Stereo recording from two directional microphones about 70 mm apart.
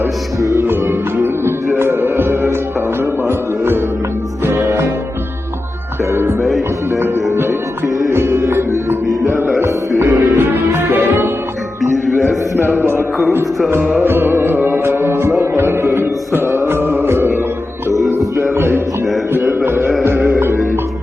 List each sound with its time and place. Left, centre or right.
0.0 s music: right
0.6 s music: right
6.4 s music: centre
8.1 s music: right
10.0 s music: right
10.3 s music: right
11.8 s music: centre
12.6 s music: right
19.6 s music: right